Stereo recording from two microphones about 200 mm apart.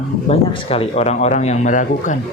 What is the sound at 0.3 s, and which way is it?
Speech, 30° left (ahead or behind).